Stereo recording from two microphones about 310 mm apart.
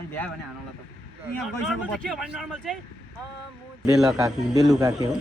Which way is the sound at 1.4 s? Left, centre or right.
Centre.